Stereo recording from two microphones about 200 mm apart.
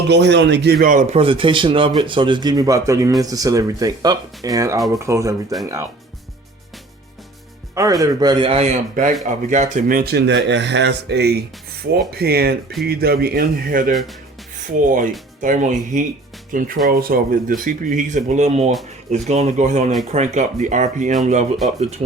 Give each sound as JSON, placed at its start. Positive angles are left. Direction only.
{"t": 0.1, "sound": "a man's voice", "side_deg": -60}
{"t": 7.8, "sound": "a man's voice", "side_deg": -15}